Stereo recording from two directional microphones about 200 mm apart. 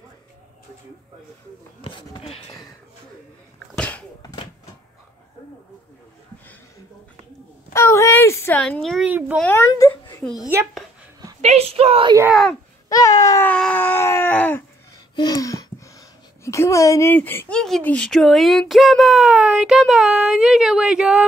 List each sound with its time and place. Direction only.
1.8 s speech: 25° left (ahead or behind)
3.7 s a sound: 5° left (ahead or behind)
7.7 s speech: 15° left (ahead or behind)
8.8 s speech: 5° right (ahead or behind)
9.4 s speech: 10° left (ahead or behind)
10.2 s speech: centre (ahead or behind)
11.4 s speech: 30° right (ahead or behind)
12.9 s a sound: 15° left (ahead or behind)
16.4 s speech: 15° left (ahead or behind); by 21.3 s 5° right (ahead or behind)